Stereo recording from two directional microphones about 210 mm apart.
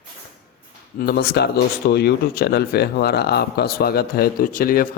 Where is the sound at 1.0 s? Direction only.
50° left (ahead or behind).